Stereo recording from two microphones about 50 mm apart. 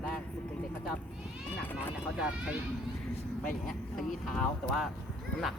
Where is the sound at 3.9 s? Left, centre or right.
Centre.